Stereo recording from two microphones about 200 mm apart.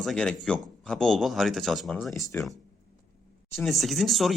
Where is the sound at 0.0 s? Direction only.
5° left (ahead or behind).